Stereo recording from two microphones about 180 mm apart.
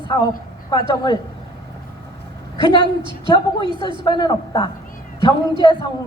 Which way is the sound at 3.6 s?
25° right (ahead or behind).